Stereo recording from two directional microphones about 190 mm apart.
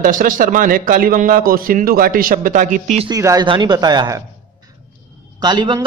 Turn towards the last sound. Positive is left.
turn(degrees=-25)  # may be behind; listen again after turning